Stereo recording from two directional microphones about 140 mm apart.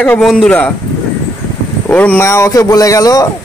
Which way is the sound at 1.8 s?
10° left (ahead or behind).